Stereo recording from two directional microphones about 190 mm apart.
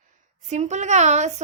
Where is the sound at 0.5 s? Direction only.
40° right (ahead or behind).